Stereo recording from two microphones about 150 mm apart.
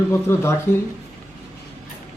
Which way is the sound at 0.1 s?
15° left (ahead or behind).